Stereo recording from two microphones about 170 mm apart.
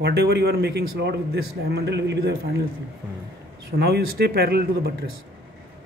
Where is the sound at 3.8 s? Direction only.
70° right (ahead or behind).